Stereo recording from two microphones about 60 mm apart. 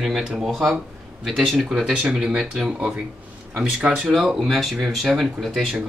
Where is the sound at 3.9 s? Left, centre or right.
Centre.